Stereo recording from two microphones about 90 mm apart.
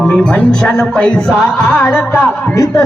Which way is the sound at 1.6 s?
30° left (ahead or behind).